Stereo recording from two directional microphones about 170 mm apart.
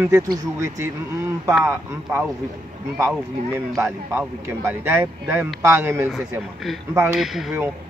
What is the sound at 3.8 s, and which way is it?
Speech, 15° right (ahead or behind).